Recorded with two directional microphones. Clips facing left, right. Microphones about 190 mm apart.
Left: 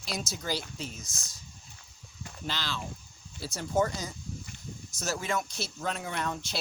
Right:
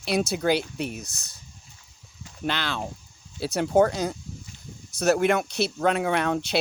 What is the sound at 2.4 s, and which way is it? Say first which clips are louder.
Speech: right 8 dB; 60° right (ahead or behind).